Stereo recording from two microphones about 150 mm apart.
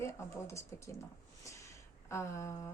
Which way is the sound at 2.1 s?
20° left (ahead or behind).